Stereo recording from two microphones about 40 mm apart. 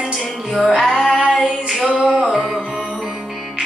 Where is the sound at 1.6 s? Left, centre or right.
Right.